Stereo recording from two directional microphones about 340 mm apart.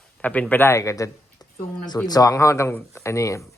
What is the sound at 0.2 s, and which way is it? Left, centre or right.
Speech, centre.